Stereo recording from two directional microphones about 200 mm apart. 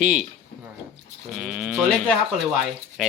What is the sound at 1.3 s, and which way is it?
Speech, 5° right (ahead or behind).